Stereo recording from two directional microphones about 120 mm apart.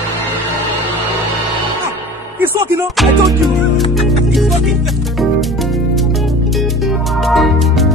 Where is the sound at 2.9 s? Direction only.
Centre (ahead or behind).